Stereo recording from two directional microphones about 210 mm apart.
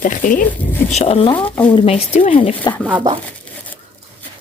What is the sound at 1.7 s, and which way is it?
Speech, 30° left (ahead or behind).